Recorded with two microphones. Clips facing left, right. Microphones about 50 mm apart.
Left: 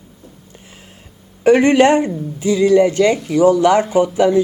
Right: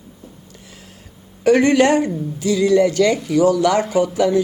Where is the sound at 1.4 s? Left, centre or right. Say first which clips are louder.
Left 3 dB; left.